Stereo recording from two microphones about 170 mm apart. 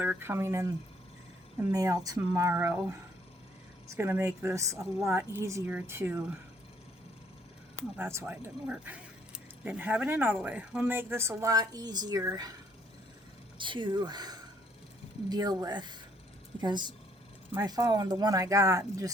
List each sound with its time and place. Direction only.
0.0 s speech: 10° right (ahead or behind)
1.7 s speech: 20° right (ahead or behind)
7.8 s speech: 15° right (ahead or behind)
13.6 s speech: 30° right (ahead or behind)